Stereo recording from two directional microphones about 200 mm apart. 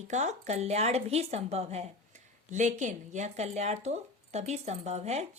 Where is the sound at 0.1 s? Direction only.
35° right (ahead or behind).